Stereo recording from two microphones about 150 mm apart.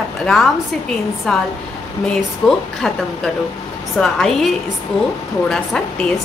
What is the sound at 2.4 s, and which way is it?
Speech, centre (ahead or behind).